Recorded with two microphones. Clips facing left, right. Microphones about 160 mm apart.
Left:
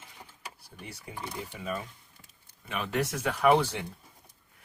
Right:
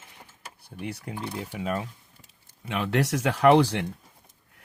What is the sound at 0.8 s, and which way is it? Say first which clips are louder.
Speech: right 7 dB; 70° right (ahead or behind).